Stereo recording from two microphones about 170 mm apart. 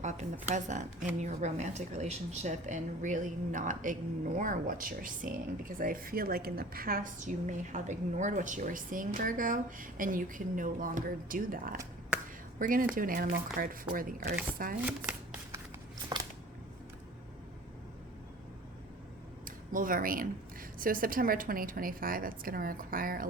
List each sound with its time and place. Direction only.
0.0 s a woman's voice: 45° right (ahead or behind)
14.8 s shuffling cards: 10° right (ahead or behind)
16.1 s a sound: 25° right (ahead or behind)
19.5 s a woman's voice: 55° right (ahead or behind)